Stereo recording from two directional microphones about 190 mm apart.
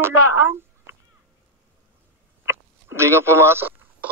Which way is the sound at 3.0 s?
15° right (ahead or behind).